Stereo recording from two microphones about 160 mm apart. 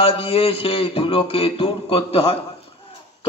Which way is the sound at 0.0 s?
35° left (ahead or behind).